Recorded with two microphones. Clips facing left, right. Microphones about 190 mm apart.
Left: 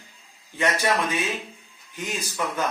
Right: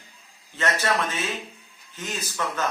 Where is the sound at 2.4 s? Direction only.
15° left (ahead or behind).